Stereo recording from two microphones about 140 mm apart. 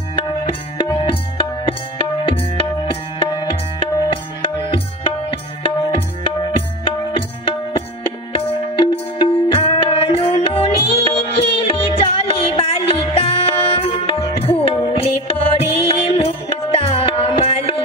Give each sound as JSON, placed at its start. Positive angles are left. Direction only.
{"t": 1.7, "sound": "tabla", "side_deg": 40}